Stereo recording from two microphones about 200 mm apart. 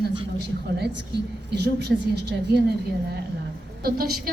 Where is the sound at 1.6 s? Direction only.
55° right (ahead or behind).